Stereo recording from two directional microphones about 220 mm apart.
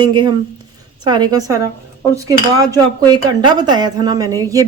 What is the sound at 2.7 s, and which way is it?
Speech, 20° right (ahead or behind).